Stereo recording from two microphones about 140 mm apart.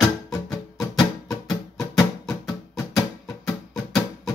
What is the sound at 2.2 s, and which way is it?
Music, 5° left (ahead or behind).